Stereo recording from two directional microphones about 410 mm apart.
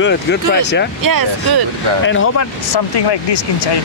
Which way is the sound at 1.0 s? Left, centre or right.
Right.